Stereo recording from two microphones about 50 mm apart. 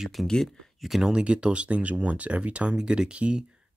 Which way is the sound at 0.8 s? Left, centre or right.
Centre.